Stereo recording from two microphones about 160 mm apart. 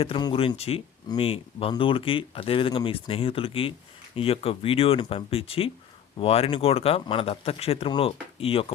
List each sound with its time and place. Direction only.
0.0 s speech: 30° left (ahead or behind)